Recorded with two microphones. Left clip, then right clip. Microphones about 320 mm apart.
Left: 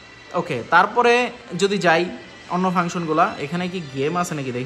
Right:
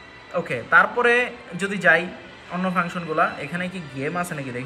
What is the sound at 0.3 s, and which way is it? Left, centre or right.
A man's voice, centre.